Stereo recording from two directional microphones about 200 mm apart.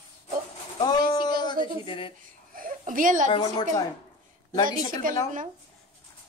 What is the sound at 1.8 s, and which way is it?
Speech, 25° left (ahead or behind).